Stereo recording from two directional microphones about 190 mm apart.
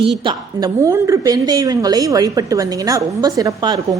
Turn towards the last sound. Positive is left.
turn(degrees=-20)  # may be behind; listen again after turning